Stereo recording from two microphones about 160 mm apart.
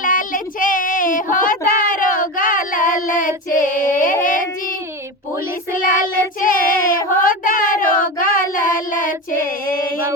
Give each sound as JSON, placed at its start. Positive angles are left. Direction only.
{"t": 0.0, "sound": "child singing", "side_deg": 55}
{"t": 5.7, "sound": "child singing", "side_deg": 55}